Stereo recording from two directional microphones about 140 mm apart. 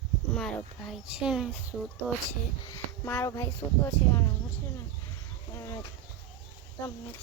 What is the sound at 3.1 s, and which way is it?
Speech, 20° left (ahead or behind).